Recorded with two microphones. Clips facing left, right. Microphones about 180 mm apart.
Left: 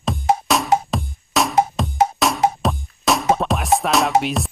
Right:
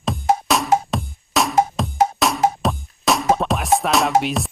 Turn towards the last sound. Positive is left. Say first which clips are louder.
# even
turn(degrees=0)  # may be behind; listen again after turning